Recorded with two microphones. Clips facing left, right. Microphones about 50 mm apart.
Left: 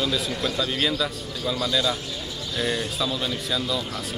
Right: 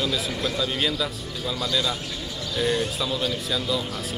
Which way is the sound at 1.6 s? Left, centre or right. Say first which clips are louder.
Left 1 dB; centre.